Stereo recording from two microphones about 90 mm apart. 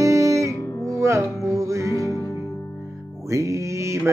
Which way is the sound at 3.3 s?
35° right (ahead or behind).